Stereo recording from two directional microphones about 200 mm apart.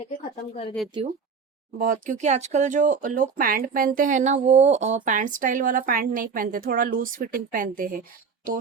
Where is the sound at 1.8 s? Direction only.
40° right (ahead or behind).